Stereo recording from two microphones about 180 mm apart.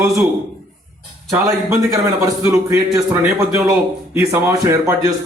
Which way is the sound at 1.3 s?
15° right (ahead or behind).